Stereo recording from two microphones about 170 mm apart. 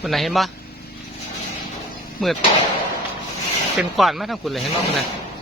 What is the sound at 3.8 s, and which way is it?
Speech, centre (ahead or behind).